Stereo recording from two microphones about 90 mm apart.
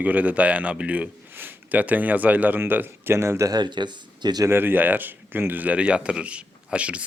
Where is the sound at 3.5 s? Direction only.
55° right (ahead or behind).